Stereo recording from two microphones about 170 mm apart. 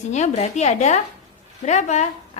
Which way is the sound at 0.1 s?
40° left (ahead or behind).